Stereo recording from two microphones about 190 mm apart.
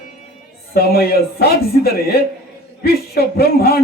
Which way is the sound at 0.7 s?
55° left (ahead or behind).